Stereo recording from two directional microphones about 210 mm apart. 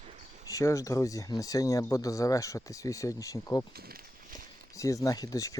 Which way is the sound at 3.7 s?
45° right (ahead or behind).